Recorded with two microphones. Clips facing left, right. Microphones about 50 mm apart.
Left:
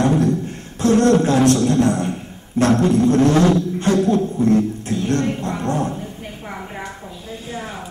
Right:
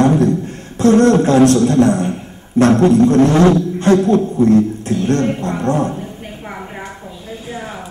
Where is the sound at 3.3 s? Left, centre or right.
Right.